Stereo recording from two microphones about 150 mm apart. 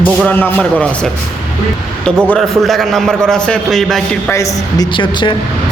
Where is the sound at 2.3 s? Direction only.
Centre (ahead or behind).